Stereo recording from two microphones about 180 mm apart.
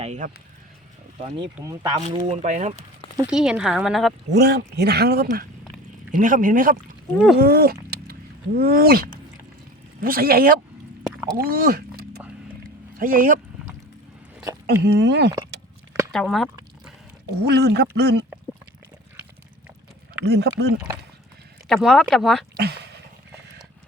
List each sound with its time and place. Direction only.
0.0 s speech: 40° right (ahead or behind)
1.5 s speech: 20° right (ahead or behind)
2.0 s speech: 40° right (ahead or behind)
3.2 s a woman's voice: 5° right (ahead or behind)
4.3 s speech: 70° right (ahead or behind); by 13.4 s 50° right (ahead or behind)
14.7 s speech: 70° right (ahead or behind)
16.1 s a sound: centre (ahead or behind)
17.3 s speech: 70° right (ahead or behind)
20.2 s speech: 65° right (ahead or behind)
21.7 s a woman's voice: centre (ahead or behind)
22.5 s speech: 65° right (ahead or behind)